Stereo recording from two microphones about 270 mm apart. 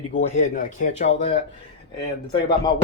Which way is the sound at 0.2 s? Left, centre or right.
Left.